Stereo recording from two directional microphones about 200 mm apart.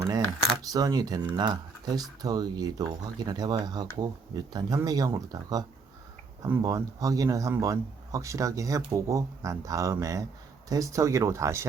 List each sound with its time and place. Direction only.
0.7 s speech: 20° right (ahead or behind)